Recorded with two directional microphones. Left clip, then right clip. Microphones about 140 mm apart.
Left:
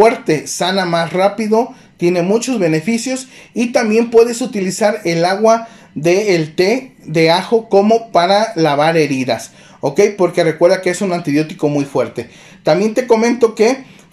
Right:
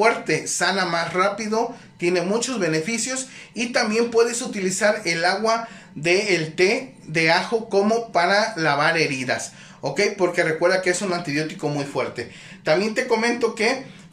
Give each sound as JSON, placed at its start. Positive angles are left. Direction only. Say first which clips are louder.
{"t": 0.0, "sound": "speech", "louder": "left 8 dB", "side_deg": 35}